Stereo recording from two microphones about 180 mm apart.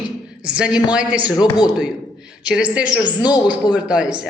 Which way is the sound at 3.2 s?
25° left (ahead or behind).